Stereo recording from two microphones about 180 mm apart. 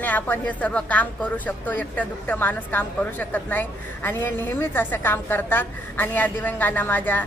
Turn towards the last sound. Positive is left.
turn(degrees=10)  # may be behind; listen again after turning